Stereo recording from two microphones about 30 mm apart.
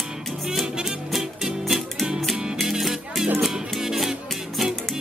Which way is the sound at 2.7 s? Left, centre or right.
Centre.